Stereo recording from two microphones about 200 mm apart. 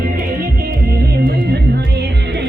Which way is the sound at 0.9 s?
50° right (ahead or behind).